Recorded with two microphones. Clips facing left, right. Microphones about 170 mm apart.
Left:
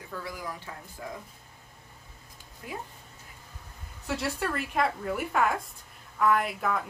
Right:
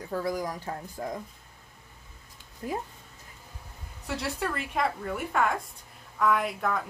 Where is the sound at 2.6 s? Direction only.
35° right (ahead or behind).